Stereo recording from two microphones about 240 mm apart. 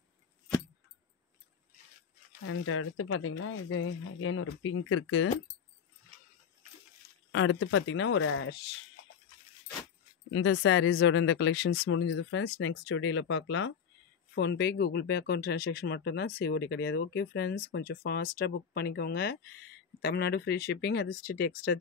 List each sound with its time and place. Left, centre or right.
2.4 s speech: left
7.3 s speech: left
10.3 s speech: left